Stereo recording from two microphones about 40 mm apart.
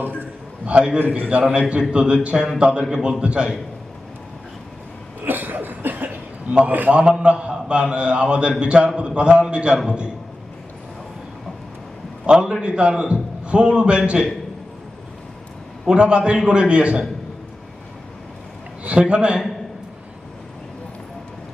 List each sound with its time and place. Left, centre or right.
0.7 s a man's voice: right
0.9 s a man's voice: right
1.3 s a man's voice: right
5.2 s cough: right
6.7 s a man's voice: right
6.9 s a man's voice: right
12.2 s a man's voice: right
15.9 s a man's voice: right
18.8 s a man's voice: right